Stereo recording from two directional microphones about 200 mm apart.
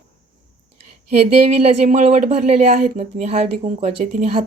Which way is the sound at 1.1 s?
35° right (ahead or behind).